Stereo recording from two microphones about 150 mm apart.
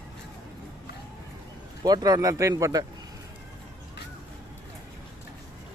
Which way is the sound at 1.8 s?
25° right (ahead or behind).